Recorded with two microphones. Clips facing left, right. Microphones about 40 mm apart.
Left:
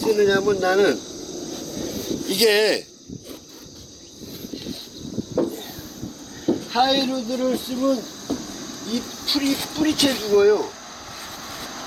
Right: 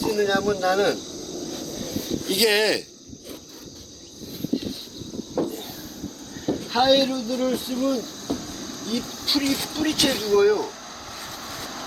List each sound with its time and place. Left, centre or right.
0.0 s cricket: centre
5.4 s a sound: centre
6.4 s speech: centre
11.3 s vehicle: centre